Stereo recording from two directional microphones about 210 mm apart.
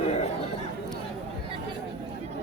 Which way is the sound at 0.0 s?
30° left (ahead or behind).